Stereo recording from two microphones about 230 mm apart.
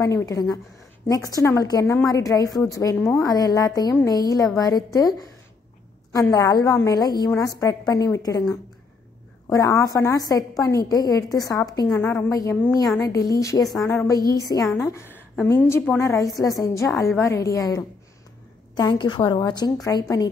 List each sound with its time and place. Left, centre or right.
0.0 s a woman's voice: centre
6.3 s a woman's voice: centre